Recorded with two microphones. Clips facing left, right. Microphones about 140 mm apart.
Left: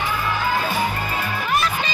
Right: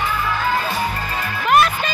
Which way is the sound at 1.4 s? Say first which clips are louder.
Right 8 dB; 60° right (ahead or behind).